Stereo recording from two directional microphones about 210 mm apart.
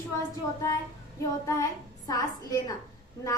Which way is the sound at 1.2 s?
15° left (ahead or behind).